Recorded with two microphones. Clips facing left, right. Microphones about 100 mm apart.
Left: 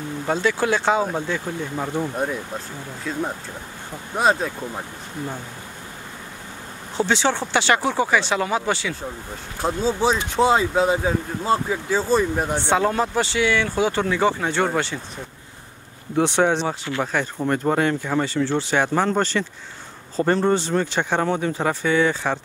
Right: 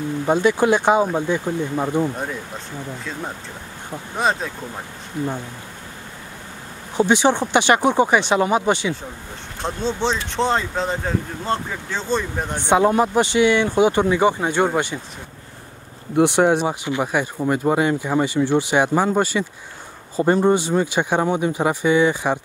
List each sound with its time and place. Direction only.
0.3 s speech: 15° right (ahead or behind)
4.2 s speech: centre (ahead or behind)
7.0 s speech: 15° right (ahead or behind)
9.6 s speech: 5° left (ahead or behind)
12.6 s speech: 15° right (ahead or behind)
16.2 s speech: 15° right (ahead or behind)